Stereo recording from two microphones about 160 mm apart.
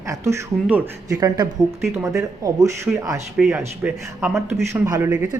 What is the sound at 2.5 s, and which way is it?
Speech, 20° right (ahead or behind).